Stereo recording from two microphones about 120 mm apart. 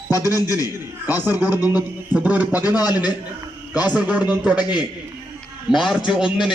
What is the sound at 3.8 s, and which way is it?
Speech, 10° right (ahead or behind).